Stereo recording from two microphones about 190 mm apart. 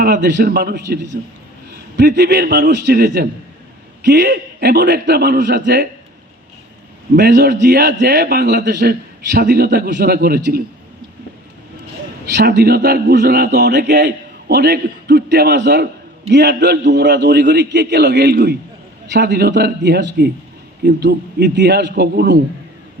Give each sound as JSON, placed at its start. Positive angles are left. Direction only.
{"t": 0.0, "sound": "a man's voice", "side_deg": -60}
{"t": 7.2, "sound": "a man's voice", "side_deg": -60}
{"t": 12.3, "sound": "a man's voice", "side_deg": -60}